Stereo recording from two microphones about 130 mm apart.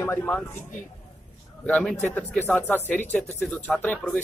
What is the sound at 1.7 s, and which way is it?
Speech, 10° left (ahead or behind).